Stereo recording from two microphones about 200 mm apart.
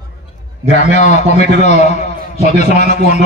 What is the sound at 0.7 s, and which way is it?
A man's voice, 35° left (ahead or behind).